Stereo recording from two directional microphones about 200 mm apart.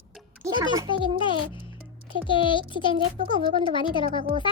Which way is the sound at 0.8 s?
25° left (ahead or behind).